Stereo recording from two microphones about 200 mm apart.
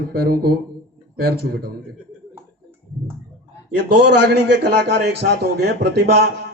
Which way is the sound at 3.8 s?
55° right (ahead or behind).